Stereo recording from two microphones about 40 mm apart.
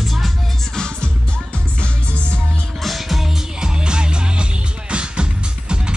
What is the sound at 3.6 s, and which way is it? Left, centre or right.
Music, right.